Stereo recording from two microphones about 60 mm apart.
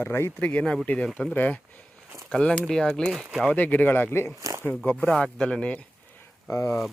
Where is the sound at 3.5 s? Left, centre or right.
Left.